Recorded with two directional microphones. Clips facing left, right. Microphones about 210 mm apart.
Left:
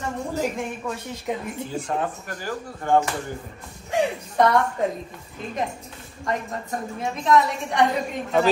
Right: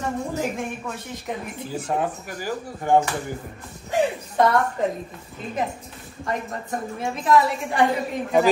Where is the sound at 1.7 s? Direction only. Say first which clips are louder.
Right 3 dB; 5° right (ahead or behind).